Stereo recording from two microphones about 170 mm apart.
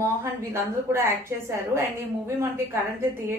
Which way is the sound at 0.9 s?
15° right (ahead or behind).